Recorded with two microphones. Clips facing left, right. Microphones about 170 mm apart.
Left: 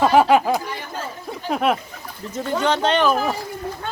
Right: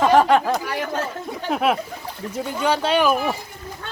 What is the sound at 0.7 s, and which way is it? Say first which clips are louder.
Chatter: right 6 dB; 75° right (ahead or behind).